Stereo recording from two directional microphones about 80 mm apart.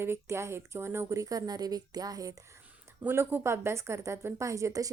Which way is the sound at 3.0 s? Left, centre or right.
Right.